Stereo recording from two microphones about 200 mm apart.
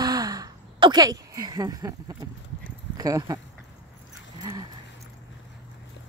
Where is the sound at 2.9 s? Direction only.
20° right (ahead or behind).